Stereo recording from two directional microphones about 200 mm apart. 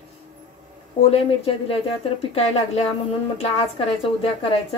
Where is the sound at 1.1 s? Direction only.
30° left (ahead or behind).